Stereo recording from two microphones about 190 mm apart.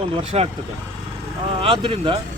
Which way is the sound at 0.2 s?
30° right (ahead or behind).